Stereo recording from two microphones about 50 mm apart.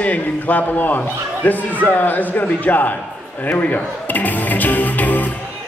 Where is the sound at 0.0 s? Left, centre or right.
Left.